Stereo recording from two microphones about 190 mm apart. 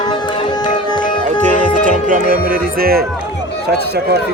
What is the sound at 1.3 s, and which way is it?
Speech, 40° right (ahead or behind).